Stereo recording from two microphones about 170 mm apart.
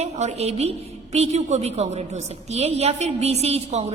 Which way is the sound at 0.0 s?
40° right (ahead or behind).